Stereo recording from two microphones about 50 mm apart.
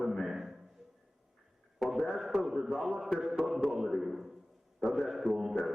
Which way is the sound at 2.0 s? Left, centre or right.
Centre.